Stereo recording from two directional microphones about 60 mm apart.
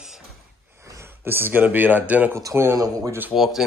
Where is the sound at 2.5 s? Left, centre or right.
Right.